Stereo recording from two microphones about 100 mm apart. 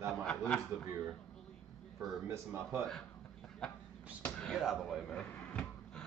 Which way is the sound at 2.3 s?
25° right (ahead or behind).